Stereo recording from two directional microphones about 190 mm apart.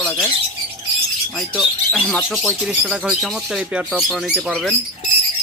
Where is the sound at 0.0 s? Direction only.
5° left (ahead or behind).